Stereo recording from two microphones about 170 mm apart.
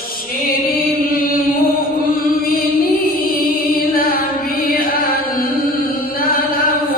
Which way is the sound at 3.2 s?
60° left (ahead or behind).